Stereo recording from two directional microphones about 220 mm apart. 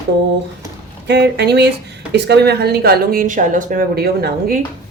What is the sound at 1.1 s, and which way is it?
Speech, 50° right (ahead or behind).